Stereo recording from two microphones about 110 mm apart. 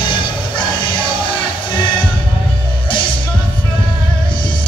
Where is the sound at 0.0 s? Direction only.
45° left (ahead or behind).